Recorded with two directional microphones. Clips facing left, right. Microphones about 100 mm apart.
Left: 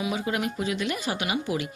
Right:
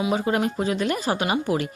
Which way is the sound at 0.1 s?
40° right (ahead or behind).